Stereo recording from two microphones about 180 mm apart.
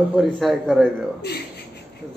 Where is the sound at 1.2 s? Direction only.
65° left (ahead or behind).